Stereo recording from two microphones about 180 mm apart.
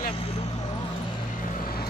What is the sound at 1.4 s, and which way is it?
Vehicle, 55° left (ahead or behind).